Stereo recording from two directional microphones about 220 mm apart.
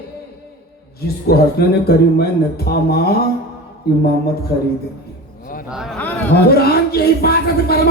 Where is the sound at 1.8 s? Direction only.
45° left (ahead or behind).